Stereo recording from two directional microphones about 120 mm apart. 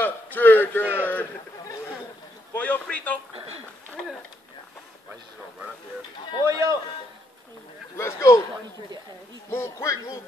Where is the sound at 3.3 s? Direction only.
55° right (ahead or behind).